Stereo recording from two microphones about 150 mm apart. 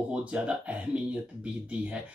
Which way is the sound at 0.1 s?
10° right (ahead or behind).